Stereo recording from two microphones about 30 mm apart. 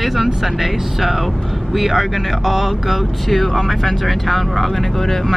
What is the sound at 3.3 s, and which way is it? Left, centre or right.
Speech, centre.